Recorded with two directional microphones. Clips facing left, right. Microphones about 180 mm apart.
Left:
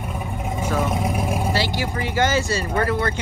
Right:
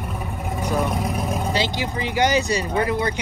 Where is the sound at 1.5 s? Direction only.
20° right (ahead or behind).